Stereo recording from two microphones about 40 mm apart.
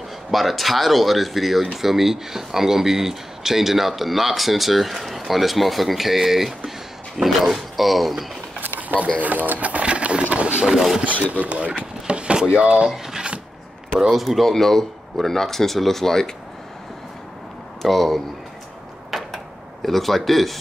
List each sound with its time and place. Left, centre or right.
0.3 s speech: centre
8.5 s a sound: right
9.2 s speech: right
10.3 s a sound: right
10.6 s speech: centre
11.1 s speech: left
11.3 s a sound: right
12.5 s speech: right
12.9 s drawer open or close: centre
14.1 s speech: centre
17.8 s speech: centre
19.3 s tick-tock: centre